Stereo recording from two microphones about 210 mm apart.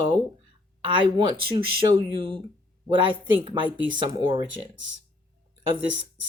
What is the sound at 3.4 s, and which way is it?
Speech, 25° right (ahead or behind).